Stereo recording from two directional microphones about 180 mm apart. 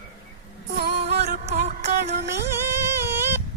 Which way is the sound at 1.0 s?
35° right (ahead or behind).